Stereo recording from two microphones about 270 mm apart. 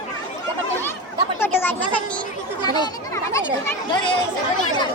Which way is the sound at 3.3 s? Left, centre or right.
Centre.